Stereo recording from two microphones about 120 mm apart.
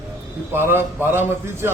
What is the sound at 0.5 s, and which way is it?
A man's voice, 20° right (ahead or behind).